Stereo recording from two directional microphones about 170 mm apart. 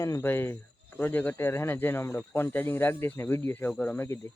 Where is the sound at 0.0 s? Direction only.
15° left (ahead or behind).